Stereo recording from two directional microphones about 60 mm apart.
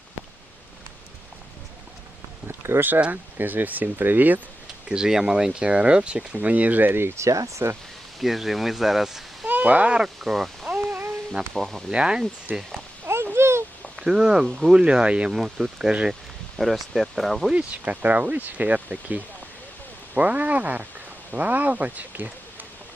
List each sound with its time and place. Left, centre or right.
2.5 s speech: right
2.9 s speech: right
4.9 s speech: centre; by 7.1 s right
7.2 s speech: right
8.2 s speech: centre
9.5 s speech: right; by 10.7 s centre
10.7 s a sound: right
11.3 s speech: centre
11.9 s speech: centre
13.3 s a sound: right
13.9 s speech: centre
16.6 s speech: centre
17.8 s speech: right